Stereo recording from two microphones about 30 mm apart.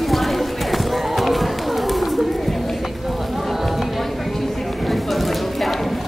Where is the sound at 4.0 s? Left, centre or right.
Centre.